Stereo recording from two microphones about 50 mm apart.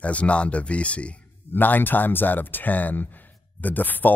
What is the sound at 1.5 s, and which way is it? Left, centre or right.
Speech, left.